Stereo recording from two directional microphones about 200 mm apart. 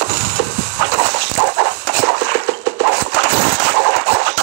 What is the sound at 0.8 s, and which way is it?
Dog, 65° right (ahead or behind).